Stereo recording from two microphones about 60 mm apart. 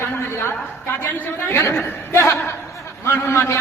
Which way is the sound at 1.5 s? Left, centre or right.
Left.